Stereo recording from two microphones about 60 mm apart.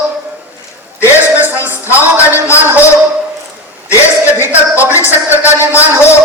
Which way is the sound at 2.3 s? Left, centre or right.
Left.